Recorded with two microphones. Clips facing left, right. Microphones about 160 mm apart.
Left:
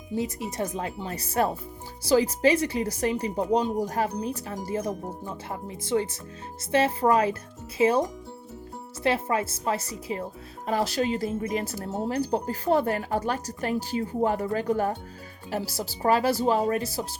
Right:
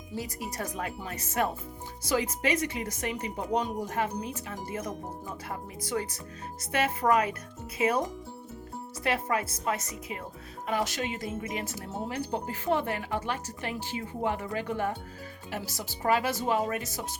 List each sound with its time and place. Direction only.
0.2 s speech: 25° left (ahead or behind)
9.0 s speech: 30° left (ahead or behind)